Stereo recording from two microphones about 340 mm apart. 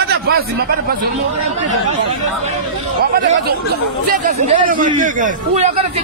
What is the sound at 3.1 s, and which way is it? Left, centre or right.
Speech, right.